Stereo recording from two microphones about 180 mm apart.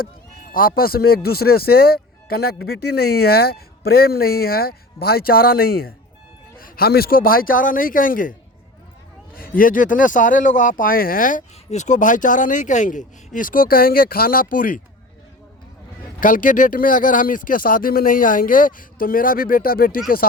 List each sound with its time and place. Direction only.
0.5 s speech: 55° left (ahead or behind)
16.2 s speech: 50° left (ahead or behind)